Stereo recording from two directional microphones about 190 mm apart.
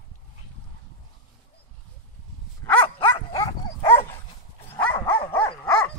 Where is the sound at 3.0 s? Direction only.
25° left (ahead or behind).